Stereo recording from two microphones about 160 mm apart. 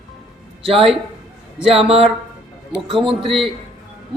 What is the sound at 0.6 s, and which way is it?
A man's voice, 35° right (ahead or behind).